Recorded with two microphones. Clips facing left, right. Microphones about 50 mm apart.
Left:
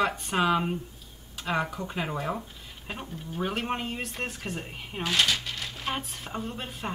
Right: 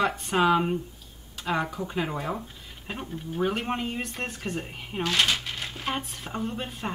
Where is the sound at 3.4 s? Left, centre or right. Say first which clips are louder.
Right 1 dB; centre.